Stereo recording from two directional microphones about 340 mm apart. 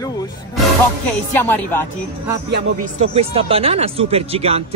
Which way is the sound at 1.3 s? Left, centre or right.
Centre.